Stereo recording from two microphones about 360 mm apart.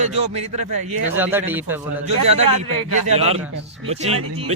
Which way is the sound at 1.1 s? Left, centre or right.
Centre.